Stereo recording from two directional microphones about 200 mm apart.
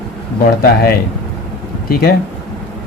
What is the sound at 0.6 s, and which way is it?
A man's voice, 50° left (ahead or behind).